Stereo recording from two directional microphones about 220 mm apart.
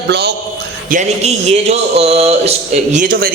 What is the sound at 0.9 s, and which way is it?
A man's voice, 30° right (ahead or behind).